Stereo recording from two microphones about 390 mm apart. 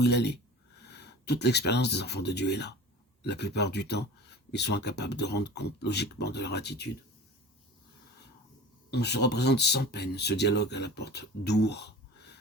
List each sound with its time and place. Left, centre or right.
0.0 s speech: left
8.9 s speech: left